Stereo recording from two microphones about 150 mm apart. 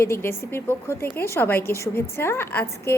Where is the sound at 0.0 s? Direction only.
15° left (ahead or behind).